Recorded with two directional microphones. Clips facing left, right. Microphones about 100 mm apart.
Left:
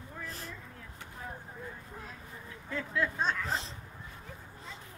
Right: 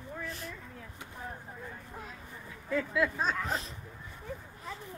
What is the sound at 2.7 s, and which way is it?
Speech, 5° right (ahead or behind).